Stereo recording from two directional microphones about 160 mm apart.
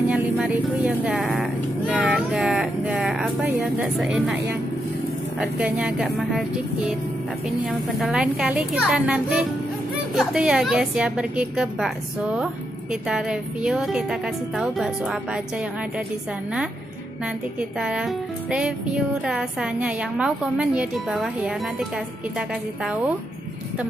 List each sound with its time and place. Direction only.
0.1 s music: 5° right (ahead or behind)
4.0 s a woman's voice: 5° right (ahead or behind)
17.6 s music: 5° right (ahead or behind)